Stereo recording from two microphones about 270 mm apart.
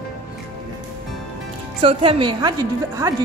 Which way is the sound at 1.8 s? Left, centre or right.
Centre.